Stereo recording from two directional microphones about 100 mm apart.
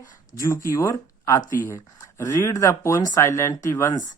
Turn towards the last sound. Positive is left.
turn(degrees=30)  # may be behind; listen again after turning